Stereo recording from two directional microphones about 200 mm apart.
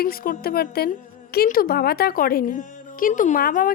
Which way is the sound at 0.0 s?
45° left (ahead or behind).